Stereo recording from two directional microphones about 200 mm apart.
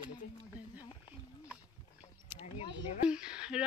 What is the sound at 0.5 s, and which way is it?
Speech, 10° right (ahead or behind).